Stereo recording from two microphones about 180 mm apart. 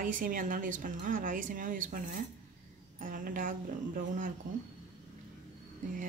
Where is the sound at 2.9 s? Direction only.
50° right (ahead or behind).